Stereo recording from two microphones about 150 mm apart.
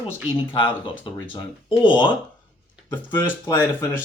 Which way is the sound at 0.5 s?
35° left (ahead or behind).